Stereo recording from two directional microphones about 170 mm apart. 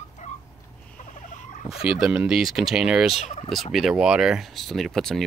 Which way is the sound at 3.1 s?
35° left (ahead or behind).